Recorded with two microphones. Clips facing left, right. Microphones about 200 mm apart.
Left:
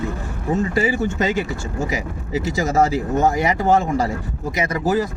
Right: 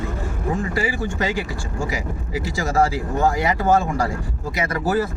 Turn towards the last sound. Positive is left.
turn(degrees=15)  # may be behind; listen again after turning